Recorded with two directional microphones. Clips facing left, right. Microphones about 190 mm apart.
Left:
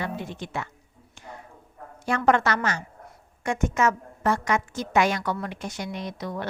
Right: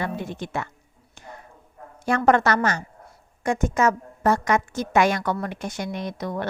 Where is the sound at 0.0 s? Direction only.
50° right (ahead or behind).